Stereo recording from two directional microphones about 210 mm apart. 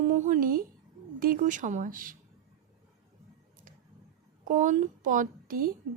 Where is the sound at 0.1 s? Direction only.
40° right (ahead or behind).